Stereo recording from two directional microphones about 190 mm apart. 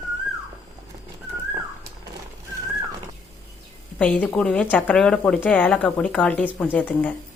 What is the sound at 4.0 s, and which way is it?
Speech, 5° left (ahead or behind).